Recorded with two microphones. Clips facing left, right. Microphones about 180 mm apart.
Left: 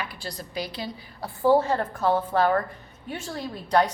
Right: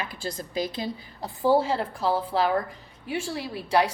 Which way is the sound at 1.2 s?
15° right (ahead or behind).